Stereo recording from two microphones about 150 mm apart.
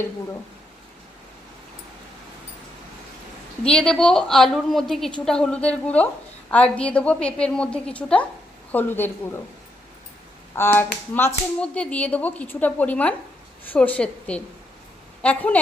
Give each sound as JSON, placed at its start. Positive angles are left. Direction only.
{"t": 3.6, "sound": "a woman's voice", "side_deg": 5}
{"t": 10.5, "sound": "a woman's voice", "side_deg": 15}